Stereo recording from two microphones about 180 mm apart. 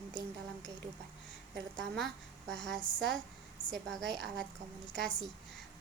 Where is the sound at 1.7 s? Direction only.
5° left (ahead or behind).